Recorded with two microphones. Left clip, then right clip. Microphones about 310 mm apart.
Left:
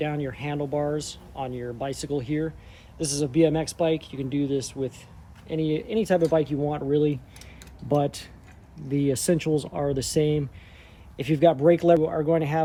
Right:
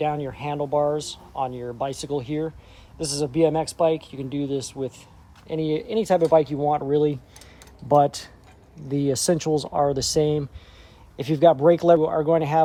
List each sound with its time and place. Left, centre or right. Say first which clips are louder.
0.0 s speech: right 4 dB; centre